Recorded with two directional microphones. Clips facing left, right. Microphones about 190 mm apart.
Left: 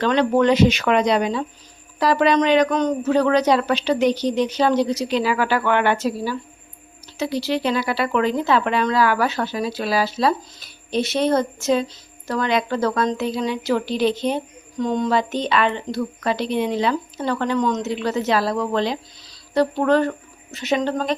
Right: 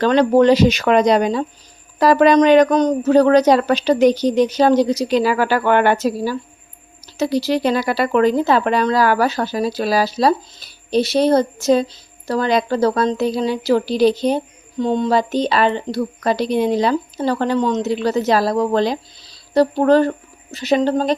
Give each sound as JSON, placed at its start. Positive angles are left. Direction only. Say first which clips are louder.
{"t": 0.0, "sound": "speech", "louder": "right 5 dB", "side_deg": -40}